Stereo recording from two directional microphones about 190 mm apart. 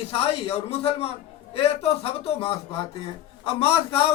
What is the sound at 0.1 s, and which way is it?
A man's voice, 30° left (ahead or behind).